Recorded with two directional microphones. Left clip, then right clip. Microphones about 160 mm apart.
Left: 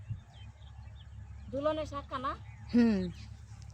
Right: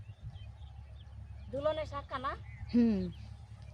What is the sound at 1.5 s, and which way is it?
Speech, 20° right (ahead or behind).